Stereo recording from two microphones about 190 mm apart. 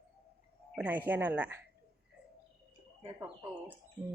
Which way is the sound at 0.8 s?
10° right (ahead or behind).